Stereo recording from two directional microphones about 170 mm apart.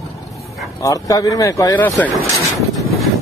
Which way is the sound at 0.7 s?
20° left (ahead or behind).